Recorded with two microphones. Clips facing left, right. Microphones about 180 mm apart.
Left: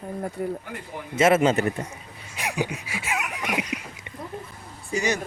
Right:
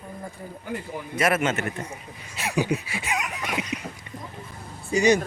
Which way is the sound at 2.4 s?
15° left (ahead or behind).